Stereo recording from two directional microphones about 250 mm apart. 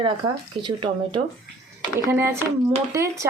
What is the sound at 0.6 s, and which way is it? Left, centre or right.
Speech, centre.